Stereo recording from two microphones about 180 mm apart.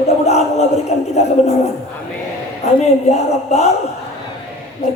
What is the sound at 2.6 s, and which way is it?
Speech, 40° left (ahead or behind).